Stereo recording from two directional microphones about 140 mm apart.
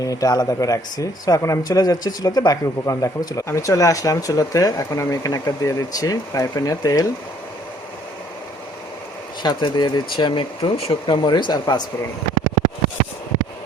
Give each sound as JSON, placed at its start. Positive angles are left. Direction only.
{"t": 0.0, "sound": "speech", "side_deg": 25}
{"t": 9.4, "sound": "speech", "side_deg": 35}